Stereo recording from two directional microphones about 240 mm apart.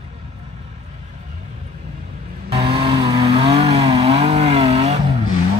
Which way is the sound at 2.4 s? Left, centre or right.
Right.